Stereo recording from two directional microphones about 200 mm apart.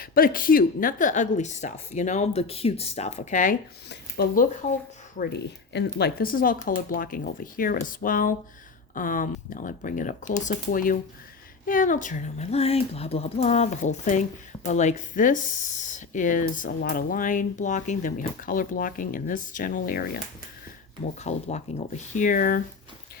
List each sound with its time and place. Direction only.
0.0 s speech: 45° left (ahead or behind)
3.8 s speech: 50° left (ahead or behind)
21.2 s speech: 35° left (ahead or behind)